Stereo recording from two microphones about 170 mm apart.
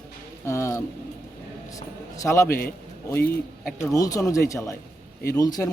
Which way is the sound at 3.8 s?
20° left (ahead or behind).